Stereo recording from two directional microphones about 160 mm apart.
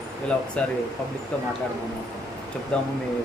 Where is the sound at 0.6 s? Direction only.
5° left (ahead or behind).